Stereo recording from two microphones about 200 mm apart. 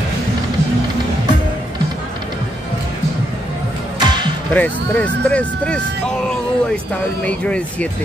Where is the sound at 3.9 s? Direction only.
20° right (ahead or behind).